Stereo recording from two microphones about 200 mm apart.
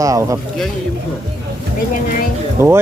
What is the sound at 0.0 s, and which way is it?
Speech, 15° right (ahead or behind).